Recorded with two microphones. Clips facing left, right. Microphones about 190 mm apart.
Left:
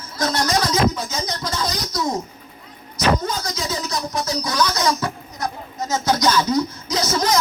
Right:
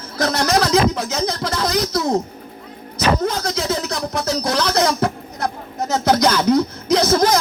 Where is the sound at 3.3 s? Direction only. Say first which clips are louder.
Right 5 dB; 60° right (ahead or behind).